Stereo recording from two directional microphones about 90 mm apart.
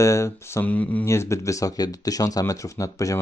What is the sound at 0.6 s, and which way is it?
Speech, 20° left (ahead or behind).